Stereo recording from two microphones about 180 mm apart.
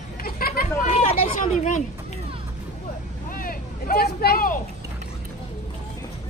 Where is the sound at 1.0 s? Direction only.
45° left (ahead or behind).